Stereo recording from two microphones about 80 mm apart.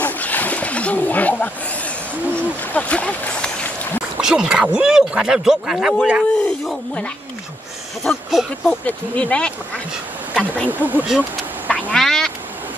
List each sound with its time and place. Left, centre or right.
0.0 s splash: left
4.2 s speech: centre
6.4 s speech: centre
8.0 s speech: centre
8.8 s speech: centre
10.7 s speech: right
11.1 s a sound: centre
11.9 s duck: centre